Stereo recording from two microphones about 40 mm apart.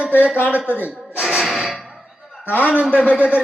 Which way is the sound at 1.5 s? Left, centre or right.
Centre.